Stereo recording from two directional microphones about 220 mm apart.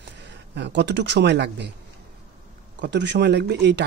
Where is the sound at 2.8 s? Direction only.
50° right (ahead or behind).